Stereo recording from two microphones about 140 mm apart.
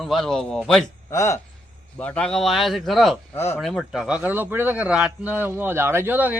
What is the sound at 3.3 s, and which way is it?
Speech, 15° left (ahead or behind).